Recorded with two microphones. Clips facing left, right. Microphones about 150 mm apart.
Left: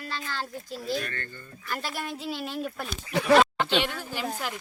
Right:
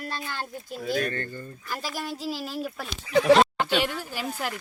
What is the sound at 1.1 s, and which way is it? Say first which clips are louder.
Speech: right 6 dB; 30° right (ahead or behind).